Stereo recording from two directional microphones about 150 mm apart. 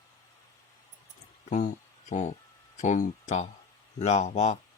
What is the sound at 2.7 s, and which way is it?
Speech, 55° left (ahead or behind).